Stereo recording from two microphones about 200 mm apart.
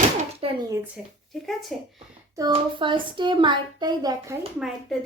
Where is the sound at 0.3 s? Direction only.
25° right (ahead or behind).